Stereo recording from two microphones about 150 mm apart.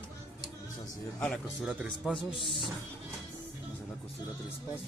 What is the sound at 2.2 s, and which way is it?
Speech, 35° left (ahead or behind).